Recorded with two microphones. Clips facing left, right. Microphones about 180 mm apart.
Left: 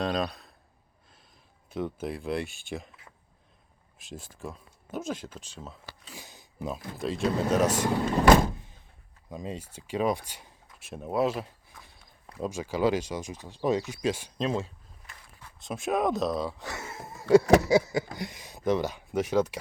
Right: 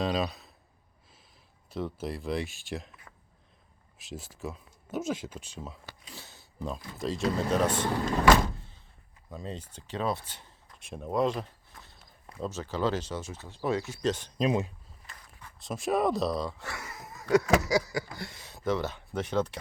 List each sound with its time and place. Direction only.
0.0 s speech: 5° right (ahead or behind)
1.7 s speech: centre (ahead or behind)
4.1 s speech: 5° right (ahead or behind)
6.1 s a sound: 15° left (ahead or behind)
6.9 s speech: centre (ahead or behind)
9.3 s speech: 10° left (ahead or behind)
14.3 s speech: 15° right (ahead or behind)
15.6 s speech: centre (ahead or behind)
16.6 s a sound: 20° left (ahead or behind)